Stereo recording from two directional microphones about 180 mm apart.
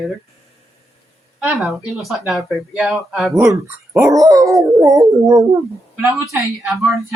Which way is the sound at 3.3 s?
15° right (ahead or behind).